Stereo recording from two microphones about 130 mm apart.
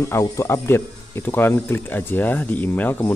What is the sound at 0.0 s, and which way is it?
Speech, 20° left (ahead or behind).